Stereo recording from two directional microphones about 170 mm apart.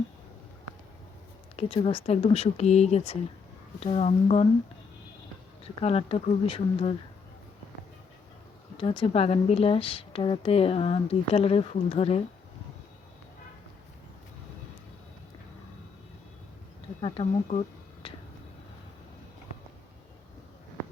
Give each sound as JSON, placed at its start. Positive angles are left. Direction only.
{"t": 1.5, "sound": "speech", "side_deg": 35}
{"t": 5.8, "sound": "speech", "side_deg": 35}
{"t": 8.8, "sound": "speech", "side_deg": 30}
{"t": 17.0, "sound": "speech", "side_deg": 35}